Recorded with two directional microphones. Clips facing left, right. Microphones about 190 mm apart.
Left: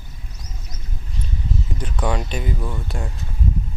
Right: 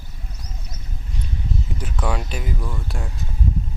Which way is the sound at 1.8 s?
Centre (ahead or behind).